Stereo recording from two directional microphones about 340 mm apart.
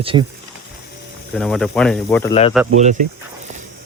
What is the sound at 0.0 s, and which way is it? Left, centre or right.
Speech, centre.